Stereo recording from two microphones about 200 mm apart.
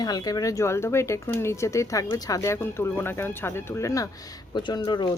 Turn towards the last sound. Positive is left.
turn(degrees=20)  # may be behind; listen again after turning